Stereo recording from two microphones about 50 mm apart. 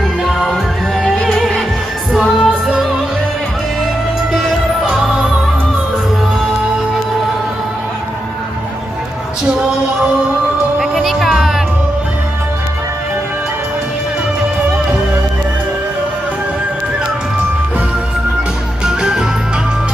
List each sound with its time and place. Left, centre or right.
0.3 s music: centre
2.1 s music: centre
10.8 s music: centre
18.9 s music: centre